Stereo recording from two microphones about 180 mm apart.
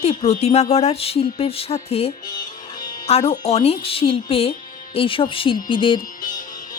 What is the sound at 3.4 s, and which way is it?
Speech, 35° left (ahead or behind).